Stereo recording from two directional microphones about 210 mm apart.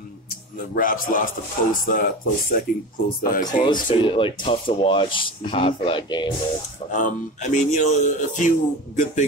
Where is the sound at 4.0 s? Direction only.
25° left (ahead or behind).